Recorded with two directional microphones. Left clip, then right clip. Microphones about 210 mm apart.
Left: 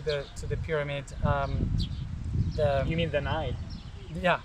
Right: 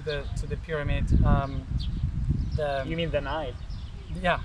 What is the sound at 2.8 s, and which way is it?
Speech, 10° right (ahead or behind).